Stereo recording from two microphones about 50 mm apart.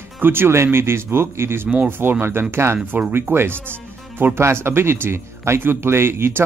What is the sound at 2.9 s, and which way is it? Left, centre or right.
Speech, right.